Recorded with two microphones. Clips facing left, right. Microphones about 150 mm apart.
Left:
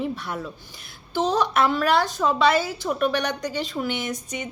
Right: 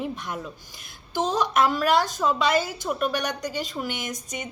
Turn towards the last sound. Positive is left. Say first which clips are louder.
# left 3 dB
turn(degrees=-15)  # may be behind; listen again after turning